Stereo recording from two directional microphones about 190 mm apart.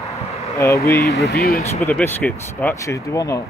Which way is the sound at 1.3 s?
55° left (ahead or behind).